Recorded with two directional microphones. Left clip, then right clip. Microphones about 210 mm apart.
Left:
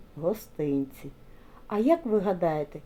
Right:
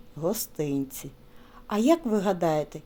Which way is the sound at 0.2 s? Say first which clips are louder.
Even; 40° right (ahead or behind).